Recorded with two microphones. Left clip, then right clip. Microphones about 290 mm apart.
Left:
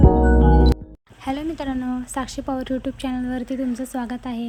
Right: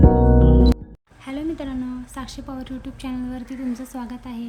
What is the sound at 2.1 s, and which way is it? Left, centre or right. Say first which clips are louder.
Speech: left 7 dB; centre.